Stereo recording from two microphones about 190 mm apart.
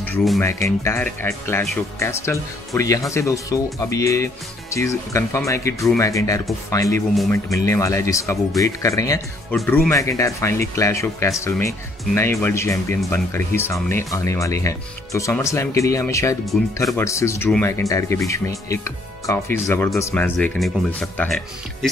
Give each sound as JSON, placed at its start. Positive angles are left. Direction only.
{"t": 0.0, "sound": "speech", "side_deg": 5}
{"t": 20.3, "sound": "speech", "side_deg": 0}